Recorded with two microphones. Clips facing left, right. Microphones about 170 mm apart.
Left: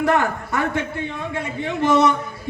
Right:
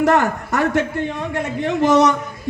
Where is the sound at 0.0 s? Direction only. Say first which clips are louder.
Right 3 dB; 40° right (ahead or behind).